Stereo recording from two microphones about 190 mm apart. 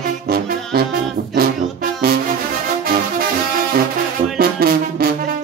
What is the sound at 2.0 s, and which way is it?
Music, 55° right (ahead or behind).